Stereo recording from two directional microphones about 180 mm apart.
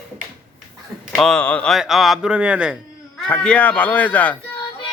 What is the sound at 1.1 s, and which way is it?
Speech, 5° left (ahead or behind).